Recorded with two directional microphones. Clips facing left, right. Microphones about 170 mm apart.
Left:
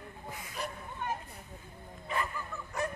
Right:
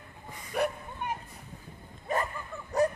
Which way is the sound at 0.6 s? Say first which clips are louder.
Right 11 dB; 60° right (ahead or behind).